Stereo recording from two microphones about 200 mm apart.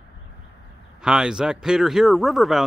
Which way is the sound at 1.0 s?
5° right (ahead or behind).